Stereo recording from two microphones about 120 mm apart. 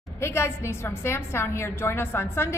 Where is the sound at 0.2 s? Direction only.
20° left (ahead or behind).